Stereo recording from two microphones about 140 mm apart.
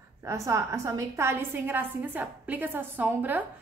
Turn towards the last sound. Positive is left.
turn(degrees=-15)  # may be behind; listen again after turning